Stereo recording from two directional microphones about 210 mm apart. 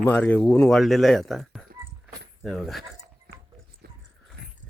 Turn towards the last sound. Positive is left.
turn(degrees=-50)  # may be behind; listen again after turning